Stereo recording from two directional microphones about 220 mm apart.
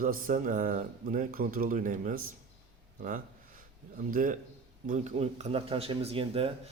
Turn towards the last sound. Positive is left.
turn(degrees=-25)  # may be behind; listen again after turning